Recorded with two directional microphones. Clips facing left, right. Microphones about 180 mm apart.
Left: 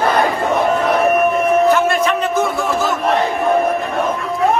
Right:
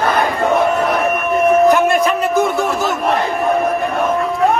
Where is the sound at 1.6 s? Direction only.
15° right (ahead or behind).